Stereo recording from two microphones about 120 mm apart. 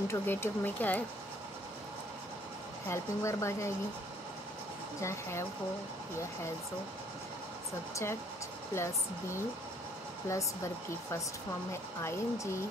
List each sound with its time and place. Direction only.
0.1 s speech: 20° left (ahead or behind)
2.9 s speech: 25° left (ahead or behind)
5.0 s speech: 25° left (ahead or behind)
7.9 s speech: 20° left (ahead or behind)